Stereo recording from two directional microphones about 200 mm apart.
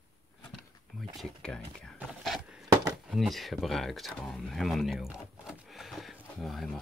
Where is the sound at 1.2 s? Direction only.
5° left (ahead or behind).